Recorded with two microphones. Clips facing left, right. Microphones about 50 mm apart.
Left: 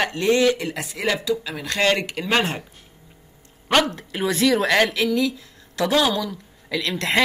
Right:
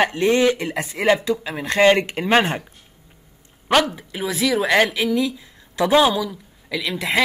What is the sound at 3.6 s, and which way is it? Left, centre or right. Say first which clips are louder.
Speech: right 1 dB; centre.